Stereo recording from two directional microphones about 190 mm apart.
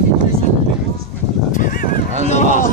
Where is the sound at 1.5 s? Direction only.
45° left (ahead or behind).